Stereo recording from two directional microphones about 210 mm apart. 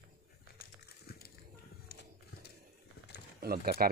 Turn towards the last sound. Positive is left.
turn(degrees=-45)  # may be behind; listen again after turning